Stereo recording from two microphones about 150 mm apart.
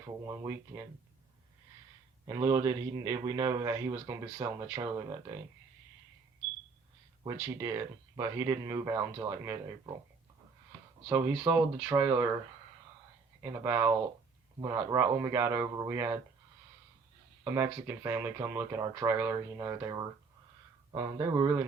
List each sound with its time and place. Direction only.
0.3 s a man's voice: 20° right (ahead or behind)
2.2 s a man's voice: 25° right (ahead or behind)
7.3 s a man's voice: 15° right (ahead or behind)
11.1 s speech: 10° right (ahead or behind)
13.4 s a man's voice: 15° right (ahead or behind)
17.4 s a man's voice: 15° right (ahead or behind)